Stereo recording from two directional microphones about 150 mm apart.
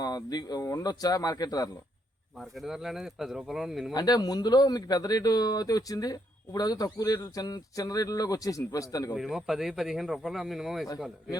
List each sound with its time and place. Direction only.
0.0 s speech: 25° left (ahead or behind)
2.4 s speech: centre (ahead or behind)
3.9 s speech: 25° left (ahead or behind)
9.1 s speech: centre (ahead or behind)